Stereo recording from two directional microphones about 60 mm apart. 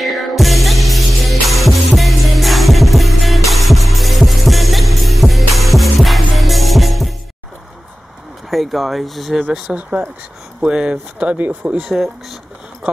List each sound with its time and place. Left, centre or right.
0.0 s music: centre
8.5 s speech: centre
9.8 s speech: right
11.9 s speech: centre